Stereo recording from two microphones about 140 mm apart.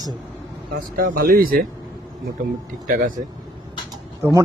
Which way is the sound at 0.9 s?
90° right.